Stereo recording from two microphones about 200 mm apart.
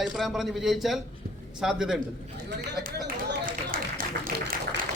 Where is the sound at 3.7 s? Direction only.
45° right (ahead or behind).